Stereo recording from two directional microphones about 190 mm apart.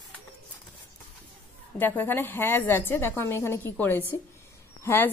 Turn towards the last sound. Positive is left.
turn(degrees=10)  # may be behind; listen again after turning